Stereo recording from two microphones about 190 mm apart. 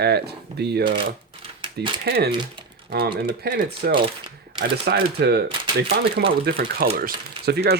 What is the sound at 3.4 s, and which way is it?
Speech, 60° right (ahead or behind).